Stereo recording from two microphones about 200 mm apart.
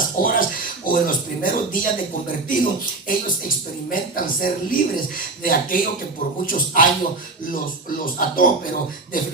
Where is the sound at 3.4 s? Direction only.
45° left (ahead or behind).